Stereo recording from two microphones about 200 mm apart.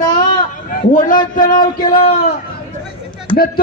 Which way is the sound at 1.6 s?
25° left (ahead or behind).